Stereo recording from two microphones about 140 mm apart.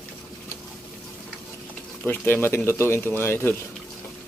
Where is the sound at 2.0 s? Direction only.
15° left (ahead or behind).